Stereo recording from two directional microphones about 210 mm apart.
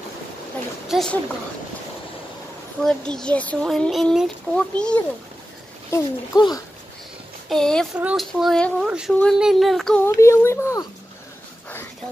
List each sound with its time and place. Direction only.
0.8 s speech: centre (ahead or behind)
2.8 s speech: 5° left (ahead or behind)
5.9 s speech: 15° left (ahead or behind)
7.4 s speech: 5° left (ahead or behind)